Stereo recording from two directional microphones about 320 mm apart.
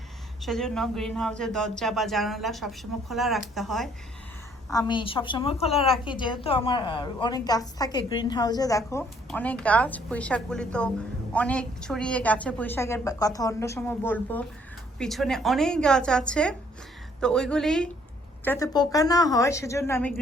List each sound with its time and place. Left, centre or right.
0.4 s speech: centre
4.7 s a woman's voice: centre